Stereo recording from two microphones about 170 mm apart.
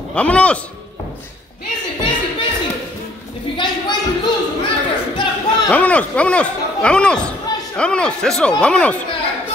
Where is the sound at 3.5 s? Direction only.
25° left (ahead or behind).